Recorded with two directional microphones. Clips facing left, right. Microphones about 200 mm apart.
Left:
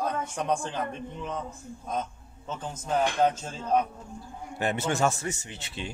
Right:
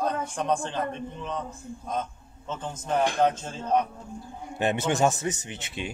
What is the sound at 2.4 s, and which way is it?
A man's voice, 5° left (ahead or behind).